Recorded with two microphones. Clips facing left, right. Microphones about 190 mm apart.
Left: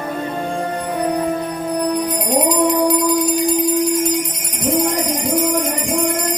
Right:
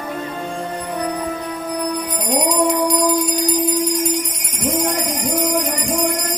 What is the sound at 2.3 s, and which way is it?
Music, centre (ahead or behind).